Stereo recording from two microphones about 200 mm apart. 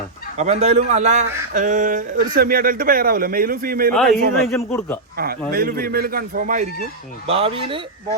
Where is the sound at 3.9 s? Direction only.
Centre (ahead or behind).